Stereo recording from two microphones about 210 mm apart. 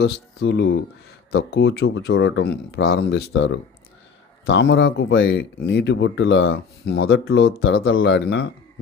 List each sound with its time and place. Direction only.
0.0 s speech: 50° left (ahead or behind)
1.8 s speech: 65° left (ahead or behind)